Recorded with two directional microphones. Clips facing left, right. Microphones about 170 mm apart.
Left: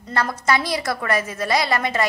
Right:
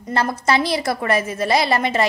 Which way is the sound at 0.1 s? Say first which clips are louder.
Right 2 dB; 25° right (ahead or behind).